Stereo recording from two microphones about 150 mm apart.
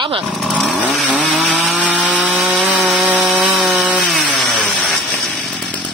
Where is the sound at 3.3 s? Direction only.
5° right (ahead or behind).